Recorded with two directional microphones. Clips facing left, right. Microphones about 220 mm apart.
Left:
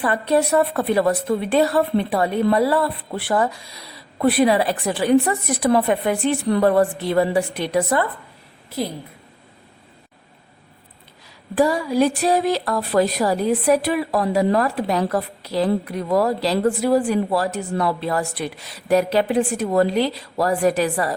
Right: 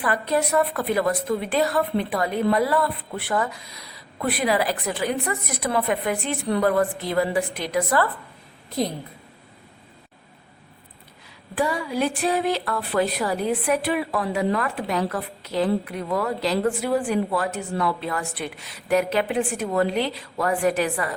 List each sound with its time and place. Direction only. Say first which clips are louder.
0.0 s a woman's voice: left 4 dB; 30° left (ahead or behind)
11.5 s speech: left 6 dB; 40° left (ahead or behind)